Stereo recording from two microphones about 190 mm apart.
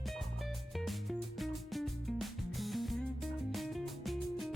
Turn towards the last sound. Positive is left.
turn(degrees=0)  # may be behind; listen again after turning